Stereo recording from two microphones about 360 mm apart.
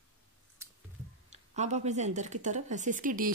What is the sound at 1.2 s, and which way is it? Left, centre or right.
Speech, centre.